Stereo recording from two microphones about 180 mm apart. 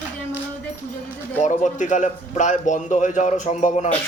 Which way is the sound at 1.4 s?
40° left (ahead or behind).